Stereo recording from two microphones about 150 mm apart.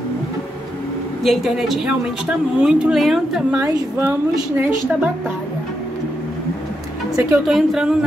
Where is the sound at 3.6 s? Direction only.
20° right (ahead or behind).